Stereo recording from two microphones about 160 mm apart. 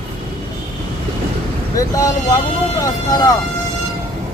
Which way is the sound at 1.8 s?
20° left (ahead or behind).